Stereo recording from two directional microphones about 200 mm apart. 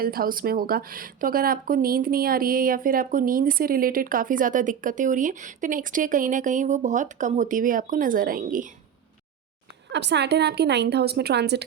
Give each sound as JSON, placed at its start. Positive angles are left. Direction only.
{"t": 0.0, "sound": "speech", "side_deg": -45}
{"t": 9.9, "sound": "a woman's voice", "side_deg": -60}